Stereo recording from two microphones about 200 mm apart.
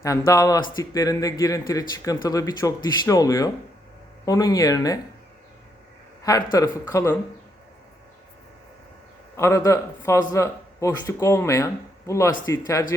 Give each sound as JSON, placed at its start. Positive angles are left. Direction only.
{"t": 0.0, "sound": "speech", "side_deg": 15}
{"t": 6.2, "sound": "speech", "side_deg": 15}
{"t": 9.3, "sound": "speech", "side_deg": 15}